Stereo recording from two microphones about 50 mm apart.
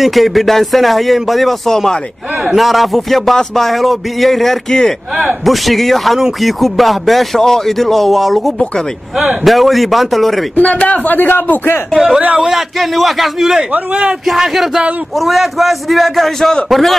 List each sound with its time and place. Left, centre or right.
0.0 s speech: centre
10.5 s a man's voice: left
11.9 s speech: centre
12.2 s a man's voice: right
12.4 s speech: centre
13.7 s a man's voice: right
14.2 s speech: centre